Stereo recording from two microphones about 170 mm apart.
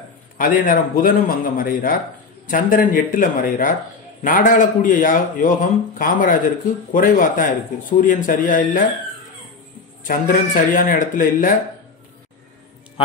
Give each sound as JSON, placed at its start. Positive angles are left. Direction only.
{"t": 0.4, "sound": "a man's voice", "side_deg": 55}
{"t": 10.0, "sound": "a man's voice", "side_deg": 55}